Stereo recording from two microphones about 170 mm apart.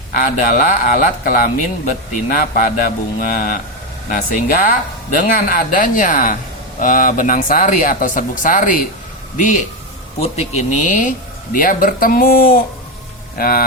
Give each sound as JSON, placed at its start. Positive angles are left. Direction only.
{"t": 0.1, "sound": "speech", "side_deg": 55}
{"t": 10.2, "sound": "speech", "side_deg": 40}
{"t": 11.5, "sound": "speech", "side_deg": 55}